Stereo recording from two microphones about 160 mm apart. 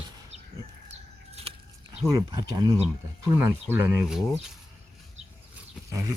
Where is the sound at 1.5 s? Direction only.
35° right (ahead or behind).